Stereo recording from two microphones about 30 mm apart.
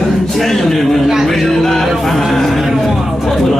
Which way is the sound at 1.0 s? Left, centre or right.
Centre.